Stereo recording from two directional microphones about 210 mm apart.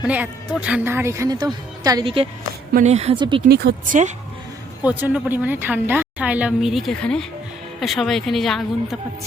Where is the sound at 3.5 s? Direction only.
45° right (ahead or behind).